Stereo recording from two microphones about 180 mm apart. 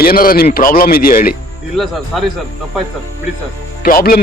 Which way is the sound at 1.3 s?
Centre (ahead or behind).